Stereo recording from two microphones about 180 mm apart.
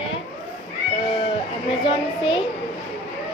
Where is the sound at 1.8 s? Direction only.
25° left (ahead or behind).